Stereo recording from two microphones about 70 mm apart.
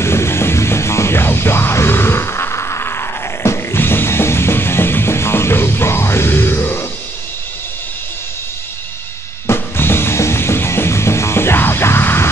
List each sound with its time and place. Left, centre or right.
0.0 s music: left
9.5 s music: left